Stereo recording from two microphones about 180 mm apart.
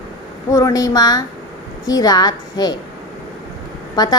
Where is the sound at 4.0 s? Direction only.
20° left (ahead or behind).